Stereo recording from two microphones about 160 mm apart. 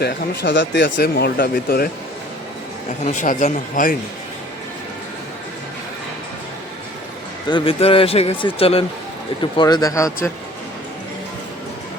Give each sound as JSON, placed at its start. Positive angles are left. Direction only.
{"t": 0.0, "sound": "speech", "side_deg": 90}
{"t": 3.0, "sound": "speech", "side_deg": 50}
{"t": 7.5, "sound": "speech", "side_deg": 35}